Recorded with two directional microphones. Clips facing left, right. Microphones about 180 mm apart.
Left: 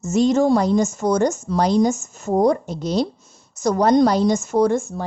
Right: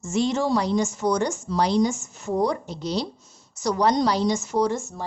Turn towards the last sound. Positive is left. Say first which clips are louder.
# left 6 dB
turn(degrees=55)  # may be behind; listen again after turning